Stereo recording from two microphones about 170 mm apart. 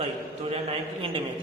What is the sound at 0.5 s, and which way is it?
Speech, 35° right (ahead or behind).